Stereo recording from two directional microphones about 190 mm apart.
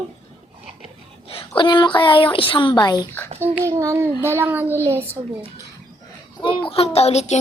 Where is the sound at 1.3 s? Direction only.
25° left (ahead or behind).